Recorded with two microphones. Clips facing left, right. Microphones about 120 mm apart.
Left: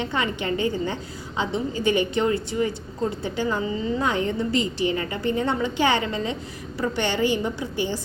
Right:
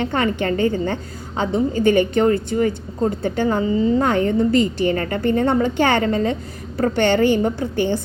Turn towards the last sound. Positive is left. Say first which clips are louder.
# right 6 dB
turn(degrees=-55)  # may be behind; listen again after turning